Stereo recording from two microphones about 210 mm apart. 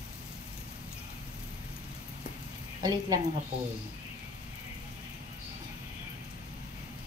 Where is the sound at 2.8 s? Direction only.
20° right (ahead or behind).